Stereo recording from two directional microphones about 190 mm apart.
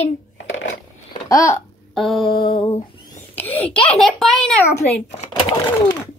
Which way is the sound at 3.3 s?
10° left (ahead or behind).